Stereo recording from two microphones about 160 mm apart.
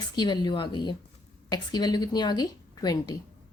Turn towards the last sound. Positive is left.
turn(degrees=25)  # may be behind; listen again after turning